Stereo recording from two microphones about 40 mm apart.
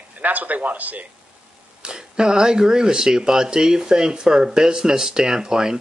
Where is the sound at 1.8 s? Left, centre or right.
Right.